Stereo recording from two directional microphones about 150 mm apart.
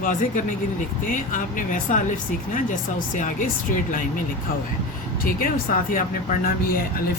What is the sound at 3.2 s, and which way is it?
Speech, 65° left (ahead or behind).